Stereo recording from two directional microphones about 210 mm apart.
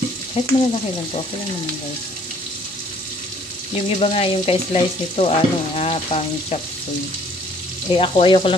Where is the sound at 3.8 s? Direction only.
30° left (ahead or behind).